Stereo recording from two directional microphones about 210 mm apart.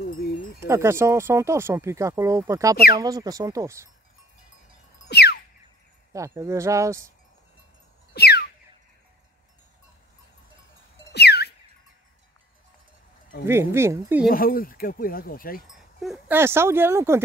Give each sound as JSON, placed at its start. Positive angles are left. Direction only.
{"t": 0.7, "sound": "speech", "side_deg": -15}
{"t": 5.1, "sound": "music", "side_deg": 50}
{"t": 6.1, "sound": "speech", "side_deg": -15}
{"t": 8.1, "sound": "a sound", "side_deg": 50}
{"t": 11.1, "sound": "a sound", "side_deg": 50}
{"t": 13.5, "sound": "speech", "side_deg": -10}
{"t": 14.3, "sound": "speech", "side_deg": 45}
{"t": 15.6, "sound": "speech", "side_deg": 0}